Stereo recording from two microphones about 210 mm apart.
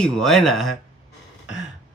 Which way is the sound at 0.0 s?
Centre (ahead or behind).